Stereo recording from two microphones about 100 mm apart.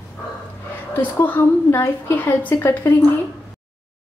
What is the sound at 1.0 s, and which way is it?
A woman's voice, 20° left (ahead or behind).